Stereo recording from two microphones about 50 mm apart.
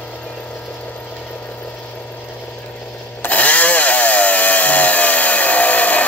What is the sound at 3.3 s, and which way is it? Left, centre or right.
Chainsaw, left.